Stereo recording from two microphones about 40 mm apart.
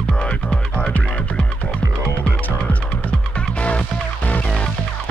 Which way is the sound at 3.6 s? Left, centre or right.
Left.